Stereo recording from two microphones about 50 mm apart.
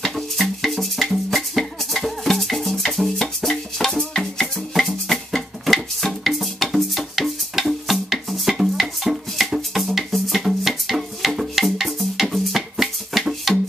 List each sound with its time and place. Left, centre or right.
0.0 s music: centre